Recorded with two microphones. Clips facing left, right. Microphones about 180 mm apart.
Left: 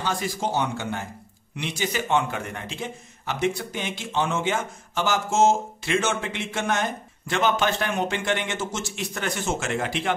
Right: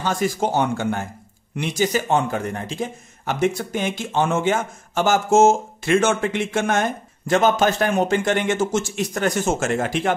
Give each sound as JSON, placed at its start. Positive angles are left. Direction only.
{"t": 0.0, "sound": "a man's voice", "side_deg": -50}